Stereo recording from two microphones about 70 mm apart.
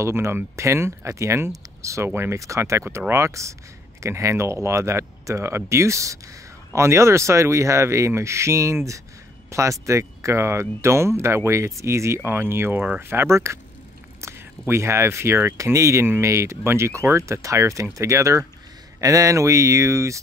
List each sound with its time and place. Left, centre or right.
0.0 s speech: right
12.2 s speech: right
12.7 s speech: right
13.0 s speech: right
14.2 s a sound: right
14.7 s speech: right
15.5 s speech: right